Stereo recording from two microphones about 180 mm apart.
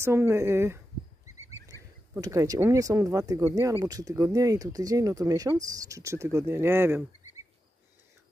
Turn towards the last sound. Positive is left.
turn(degrees=-15)  # may be behind; listen again after turning